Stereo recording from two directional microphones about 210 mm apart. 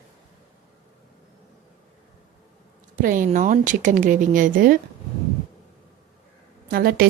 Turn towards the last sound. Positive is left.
turn(degrees=-45)  # may be behind; listen again after turning